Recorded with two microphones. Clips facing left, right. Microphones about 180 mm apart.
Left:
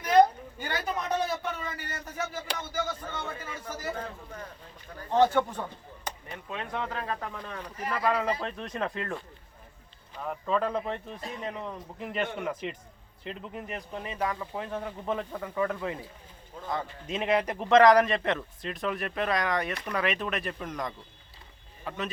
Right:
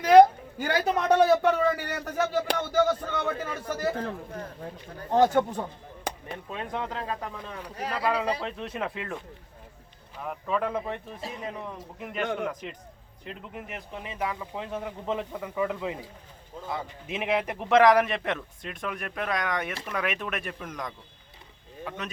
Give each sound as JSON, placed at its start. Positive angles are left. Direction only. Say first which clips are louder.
{"t": 0.0, "sound": "a man's voice", "louder": "right 6 dB", "side_deg": -75}
{"t": 5.1, "sound": "speech", "louder": "right 2 dB", "side_deg": -45}
{"t": 6.5, "sound": "a man's voice", "louder": "right 1 dB", "side_deg": -20}
{"t": 13.2, "sound": "a man's voice", "louder": "left 2 dB", "side_deg": -5}